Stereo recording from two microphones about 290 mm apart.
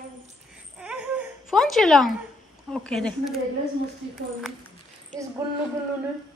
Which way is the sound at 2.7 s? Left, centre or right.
Centre.